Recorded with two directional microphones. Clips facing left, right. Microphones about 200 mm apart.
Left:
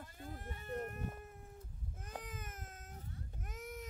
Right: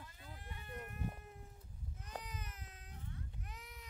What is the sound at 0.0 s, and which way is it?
Sheep, 50° left (ahead or behind).